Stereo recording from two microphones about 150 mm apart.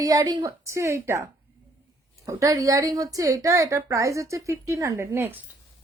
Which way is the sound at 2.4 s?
20° right (ahead or behind).